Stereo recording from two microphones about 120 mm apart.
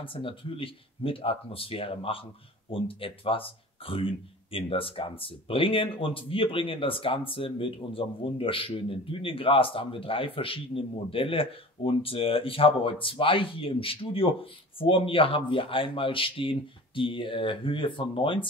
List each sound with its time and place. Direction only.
0.0 s speech: 45° left (ahead or behind)